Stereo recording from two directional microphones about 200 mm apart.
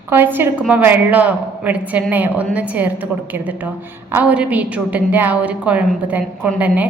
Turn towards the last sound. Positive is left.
turn(degrees=-5)  # may be behind; listen again after turning